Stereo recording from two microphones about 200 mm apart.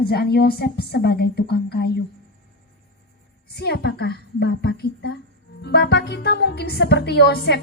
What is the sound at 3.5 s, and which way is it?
Speech, 55° left (ahead or behind).